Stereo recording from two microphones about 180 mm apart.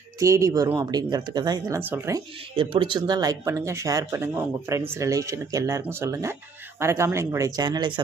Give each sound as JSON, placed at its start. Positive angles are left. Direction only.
{"t": 0.2, "sound": "speech", "side_deg": -15}
{"t": 2.6, "sound": "speech", "side_deg": -30}